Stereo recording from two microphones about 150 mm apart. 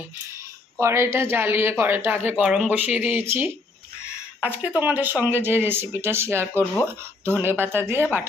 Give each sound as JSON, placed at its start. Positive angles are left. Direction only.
{"t": 0.8, "sound": "speech", "side_deg": -20}